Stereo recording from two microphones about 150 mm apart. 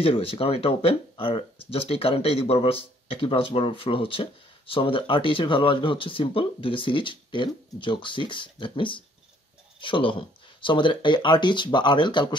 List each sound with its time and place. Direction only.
0.0 s speech: 40° left (ahead or behind)